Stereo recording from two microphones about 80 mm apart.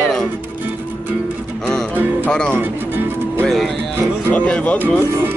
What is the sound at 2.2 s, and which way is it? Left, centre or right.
Speech, centre.